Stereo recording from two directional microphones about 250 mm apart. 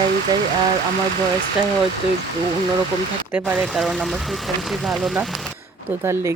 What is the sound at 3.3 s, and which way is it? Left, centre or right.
Speech, centre.